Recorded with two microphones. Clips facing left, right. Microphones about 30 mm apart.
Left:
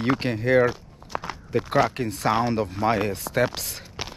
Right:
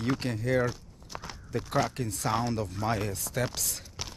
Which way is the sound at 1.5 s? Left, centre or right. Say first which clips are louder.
Left 7 dB; left.